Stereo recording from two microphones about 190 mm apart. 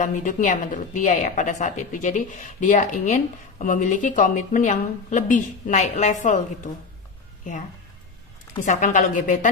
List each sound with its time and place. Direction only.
0.0 s a woman's voice: 45° left (ahead or behind)
8.6 s a woman's voice: 40° left (ahead or behind)